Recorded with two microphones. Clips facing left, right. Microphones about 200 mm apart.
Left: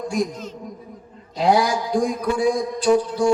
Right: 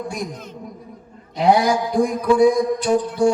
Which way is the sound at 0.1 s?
55° right (ahead or behind).